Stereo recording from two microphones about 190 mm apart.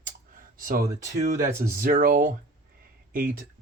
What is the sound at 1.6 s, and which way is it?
Speech, 50° right (ahead or behind).